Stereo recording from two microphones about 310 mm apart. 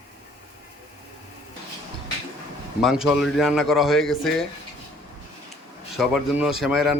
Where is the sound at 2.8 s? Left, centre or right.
Centre.